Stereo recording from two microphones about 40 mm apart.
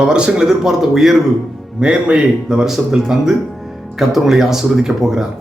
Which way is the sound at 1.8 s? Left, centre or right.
Right.